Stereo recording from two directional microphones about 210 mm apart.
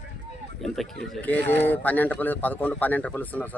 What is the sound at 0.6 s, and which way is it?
Speech, centre (ahead or behind).